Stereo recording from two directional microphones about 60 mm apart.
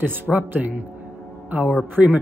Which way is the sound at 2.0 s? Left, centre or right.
Centre.